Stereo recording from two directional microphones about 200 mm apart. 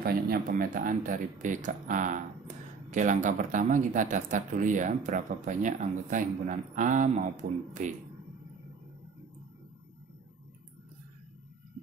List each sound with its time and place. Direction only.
0.0 s speech: 45° right (ahead or behind)